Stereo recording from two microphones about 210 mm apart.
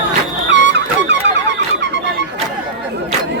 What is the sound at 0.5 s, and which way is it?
Music, 55° right (ahead or behind).